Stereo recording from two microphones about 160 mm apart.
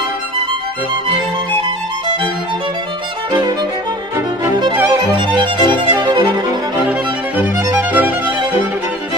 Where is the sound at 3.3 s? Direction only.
25° right (ahead or behind).